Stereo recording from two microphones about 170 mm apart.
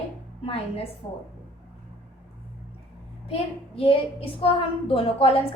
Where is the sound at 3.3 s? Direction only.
35° left (ahead or behind).